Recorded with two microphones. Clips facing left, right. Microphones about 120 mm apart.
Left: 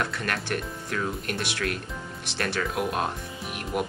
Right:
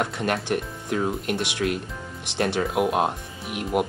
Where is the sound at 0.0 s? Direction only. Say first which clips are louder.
Right 4 dB; 20° right (ahead or behind).